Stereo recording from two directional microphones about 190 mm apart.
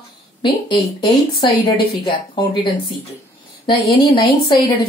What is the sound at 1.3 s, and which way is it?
Speech, 25° left (ahead or behind).